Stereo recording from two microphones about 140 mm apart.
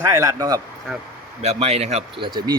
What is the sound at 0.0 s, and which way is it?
Speech, 20° right (ahead or behind).